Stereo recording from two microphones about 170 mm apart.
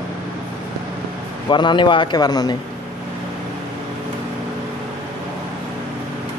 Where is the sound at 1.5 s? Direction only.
30° left (ahead or behind).